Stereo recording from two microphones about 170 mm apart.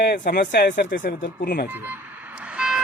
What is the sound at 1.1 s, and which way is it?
Speech, 65° left (ahead or behind).